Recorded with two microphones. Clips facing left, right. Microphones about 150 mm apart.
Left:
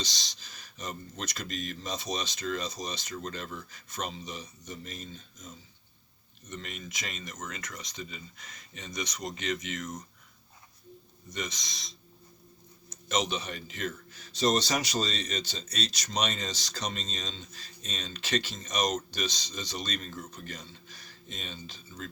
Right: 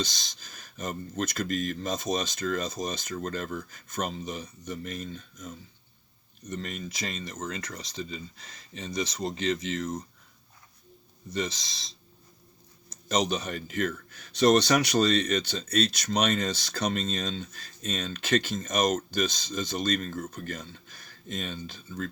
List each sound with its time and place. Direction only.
0.0 s speech: 50° right (ahead or behind)
6.5 s speech: 40° right (ahead or behind)
11.3 s speech: 30° right (ahead or behind); by 22.1 s 55° right (ahead or behind)